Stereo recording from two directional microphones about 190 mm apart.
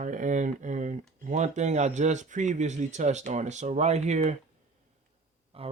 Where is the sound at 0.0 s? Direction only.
40° right (ahead or behind).